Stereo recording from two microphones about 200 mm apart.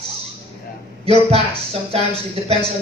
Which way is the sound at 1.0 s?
30° right (ahead or behind).